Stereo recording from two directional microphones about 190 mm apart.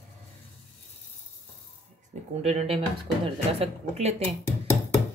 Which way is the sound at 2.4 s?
35° right (ahead or behind).